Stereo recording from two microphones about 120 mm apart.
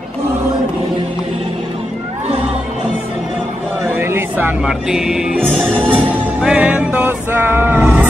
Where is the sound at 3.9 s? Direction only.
20° right (ahead or behind).